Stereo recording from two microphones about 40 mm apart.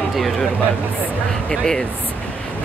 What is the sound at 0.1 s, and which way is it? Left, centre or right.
Speech, centre.